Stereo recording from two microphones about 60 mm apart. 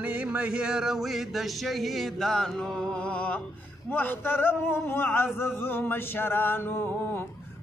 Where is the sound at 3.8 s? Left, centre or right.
Left.